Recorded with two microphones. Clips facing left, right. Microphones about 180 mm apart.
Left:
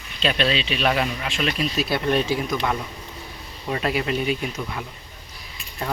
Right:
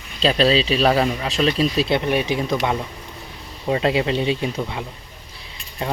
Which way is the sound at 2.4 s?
25° right (ahead or behind).